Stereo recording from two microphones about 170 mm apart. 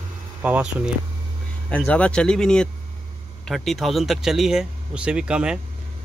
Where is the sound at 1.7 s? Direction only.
5° left (ahead or behind).